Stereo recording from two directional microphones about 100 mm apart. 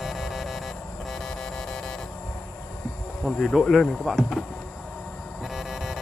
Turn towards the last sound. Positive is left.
turn(degrees=-5)  # may be behind; listen again after turning